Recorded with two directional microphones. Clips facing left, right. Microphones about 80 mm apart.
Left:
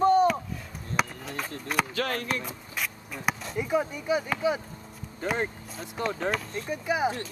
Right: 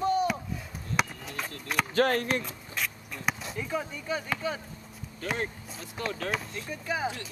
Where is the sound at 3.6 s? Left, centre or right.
Centre.